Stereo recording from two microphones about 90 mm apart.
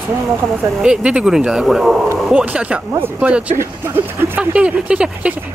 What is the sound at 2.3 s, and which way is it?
Speech, 15° right (ahead or behind).